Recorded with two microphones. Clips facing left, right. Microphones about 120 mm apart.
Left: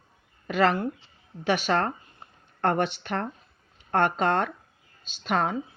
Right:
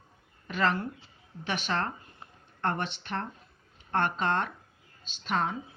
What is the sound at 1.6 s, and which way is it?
A woman's voice, 45° left (ahead or behind).